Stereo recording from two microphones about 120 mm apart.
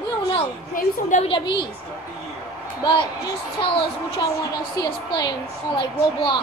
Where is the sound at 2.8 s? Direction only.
45° left (ahead or behind).